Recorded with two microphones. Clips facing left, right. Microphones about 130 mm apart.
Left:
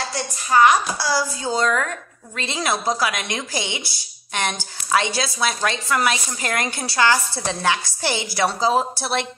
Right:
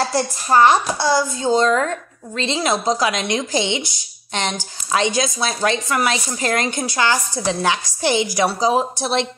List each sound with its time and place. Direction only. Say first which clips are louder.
0.1 s a woman's voice: right 4 dB; 35° right (ahead or behind); by 9.3 s 20° right (ahead or behind)